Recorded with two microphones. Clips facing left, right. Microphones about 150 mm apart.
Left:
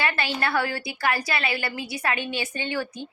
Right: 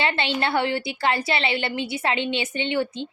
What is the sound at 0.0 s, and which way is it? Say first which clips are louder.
A woman's voice: right 2 dB; 25° right (ahead or behind).